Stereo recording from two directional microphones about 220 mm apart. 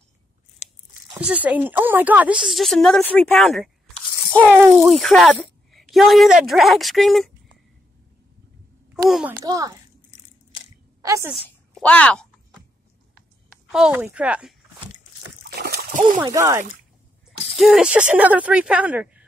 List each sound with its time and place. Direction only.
0.6 s biting: 30° left (ahead or behind)
1.2 s speech: 5° right (ahead or behind)
9.4 s a child's voice: 15° right (ahead or behind)
11.0 s a woman's voice: 15° right (ahead or behind)
11.3 s a sound: 5° left (ahead or behind)
13.7 s speech: 5° right (ahead or behind)
15.5 s splash: 45° right (ahead or behind)
16.3 s a child's voice: 15° right (ahead or behind)
17.6 s speech: centre (ahead or behind)